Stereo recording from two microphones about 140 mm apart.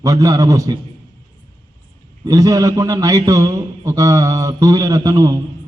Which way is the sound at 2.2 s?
25° right (ahead or behind).